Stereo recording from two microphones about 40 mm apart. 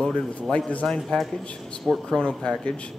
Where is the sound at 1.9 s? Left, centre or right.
Right.